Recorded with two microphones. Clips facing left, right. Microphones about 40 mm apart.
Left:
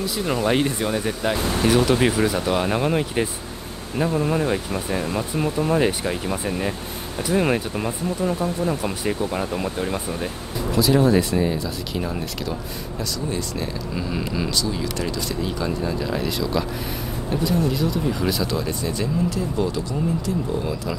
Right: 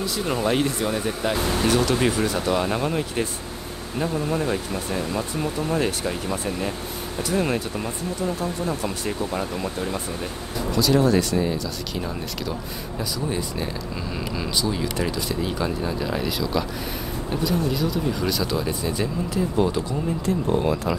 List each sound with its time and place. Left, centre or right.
0.5 s speech: centre
13.3 s speech: centre
13.9 s speech: centre
15.0 s speech: centre